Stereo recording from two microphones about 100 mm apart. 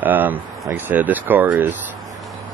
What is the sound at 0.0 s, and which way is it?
Speech, 15° right (ahead or behind).